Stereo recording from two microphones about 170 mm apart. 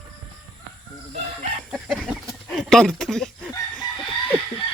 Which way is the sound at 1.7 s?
Centre (ahead or behind).